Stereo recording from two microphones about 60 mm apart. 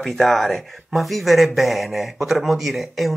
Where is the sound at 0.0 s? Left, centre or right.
Centre.